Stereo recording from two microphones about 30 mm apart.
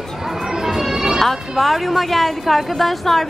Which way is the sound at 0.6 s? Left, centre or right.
Centre.